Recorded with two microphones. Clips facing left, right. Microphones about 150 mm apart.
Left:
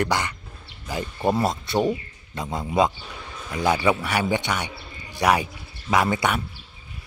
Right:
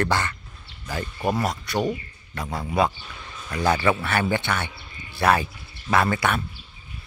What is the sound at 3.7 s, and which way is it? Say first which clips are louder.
Speech: even; 10° left (ahead or behind).